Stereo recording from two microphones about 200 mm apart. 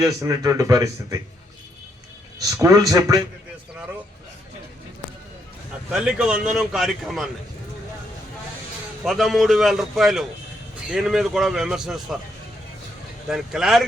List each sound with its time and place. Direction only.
0.0 s speech: 15° right (ahead or behind)
2.4 s speech: 15° right (ahead or behind)
5.9 s a man's voice: 5° right (ahead or behind)
9.0 s a man's voice: centre (ahead or behind)
13.2 s a man's voice: centre (ahead or behind)